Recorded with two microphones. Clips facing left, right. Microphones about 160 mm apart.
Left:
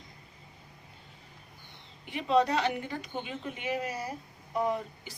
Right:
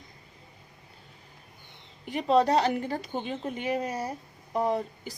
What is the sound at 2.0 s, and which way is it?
Speech, 40° right (ahead or behind).